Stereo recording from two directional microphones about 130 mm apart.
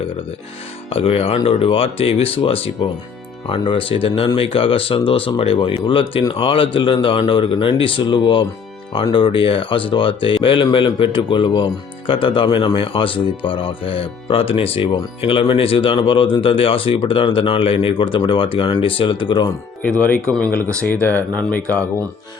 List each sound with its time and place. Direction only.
0.9 s speech: 50° left (ahead or behind)
19.8 s speech: 10° left (ahead or behind)